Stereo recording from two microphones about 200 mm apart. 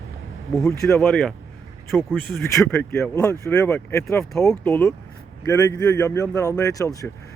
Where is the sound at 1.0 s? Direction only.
Centre (ahead or behind).